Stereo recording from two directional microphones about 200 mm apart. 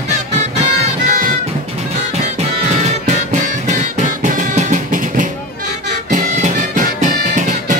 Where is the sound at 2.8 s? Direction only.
35° right (ahead or behind).